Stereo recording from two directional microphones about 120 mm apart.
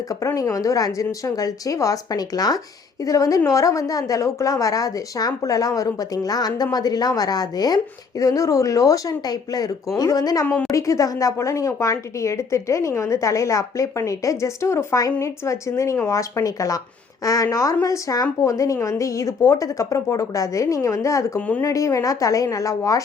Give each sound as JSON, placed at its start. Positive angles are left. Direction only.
{"t": 0.2, "sound": "speech", "side_deg": 25}
{"t": 10.4, "sound": "a woman's voice", "side_deg": 10}
{"t": 10.7, "sound": "speech", "side_deg": 25}
{"t": 21.3, "sound": "a woman's voice", "side_deg": 10}
{"t": 21.6, "sound": "speech", "side_deg": 25}